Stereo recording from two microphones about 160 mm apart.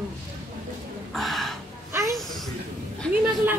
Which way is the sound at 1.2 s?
Centre (ahead or behind).